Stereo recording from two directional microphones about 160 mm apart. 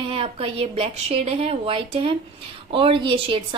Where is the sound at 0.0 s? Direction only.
35° right (ahead or behind).